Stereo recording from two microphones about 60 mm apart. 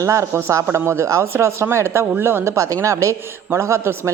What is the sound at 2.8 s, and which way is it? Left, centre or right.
A man's voice, right.